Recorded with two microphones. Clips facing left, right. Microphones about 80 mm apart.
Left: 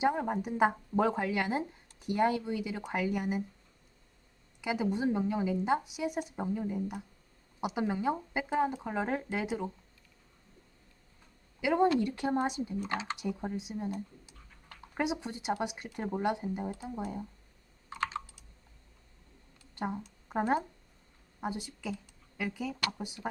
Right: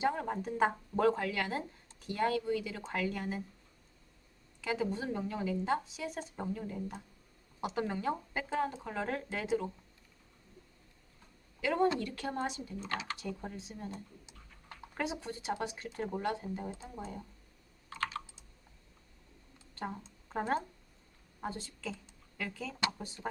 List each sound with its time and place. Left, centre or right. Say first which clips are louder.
0.0 s a woman's voice: left 3 dB; centre
4.6 s a woman's voice: left 4 dB; centre
11.6 s a woman's voice: left 4 dB; centre
13.9 s typing: left 7 dB; right
14.9 s a woman's voice: left 4 dB; centre
17.8 s computer keyboard: left 3 dB; left
19.7 s a woman's voice: left 5 dB; centre